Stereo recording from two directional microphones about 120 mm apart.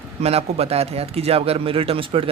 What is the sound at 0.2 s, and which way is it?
Speech, 60° right (ahead or behind).